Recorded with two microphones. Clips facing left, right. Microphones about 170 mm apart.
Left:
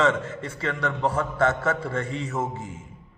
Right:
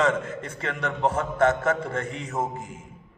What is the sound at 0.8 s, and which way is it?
Speech, 20° right (ahead or behind).